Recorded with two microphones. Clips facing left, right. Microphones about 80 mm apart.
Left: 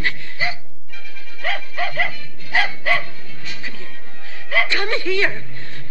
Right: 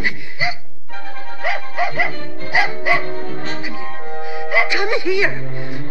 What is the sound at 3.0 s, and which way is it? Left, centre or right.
Music, right.